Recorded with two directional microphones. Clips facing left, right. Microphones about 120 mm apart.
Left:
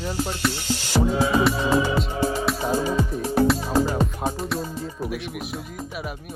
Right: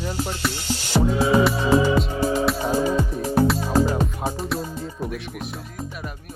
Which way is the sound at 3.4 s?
Centre (ahead or behind).